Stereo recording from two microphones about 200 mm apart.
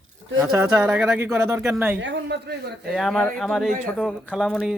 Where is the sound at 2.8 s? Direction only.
Centre (ahead or behind).